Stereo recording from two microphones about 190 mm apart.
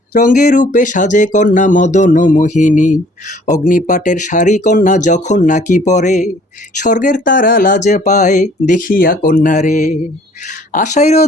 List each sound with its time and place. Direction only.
0.1 s speech: 45° left (ahead or behind)